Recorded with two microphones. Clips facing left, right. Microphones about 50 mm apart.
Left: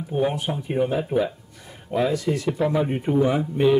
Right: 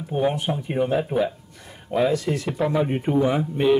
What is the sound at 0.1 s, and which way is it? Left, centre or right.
A man's voice, centre.